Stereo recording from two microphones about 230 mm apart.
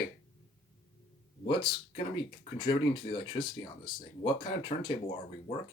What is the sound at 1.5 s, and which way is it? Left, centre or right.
Speech, left.